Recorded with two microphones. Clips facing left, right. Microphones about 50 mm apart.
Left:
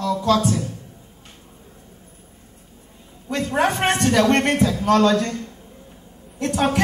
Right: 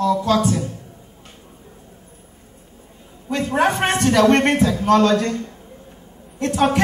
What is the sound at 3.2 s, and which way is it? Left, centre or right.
Speech, right.